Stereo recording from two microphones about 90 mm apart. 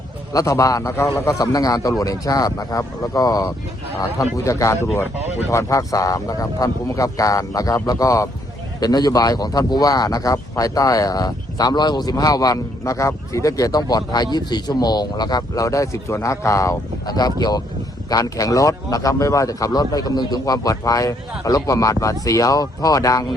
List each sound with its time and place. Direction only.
0.3 s speech: 40° left (ahead or behind)
4.4 s speech: 35° left (ahead or behind)